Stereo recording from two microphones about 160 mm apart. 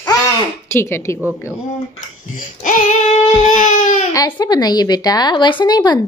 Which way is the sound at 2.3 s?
50° left (ahead or behind).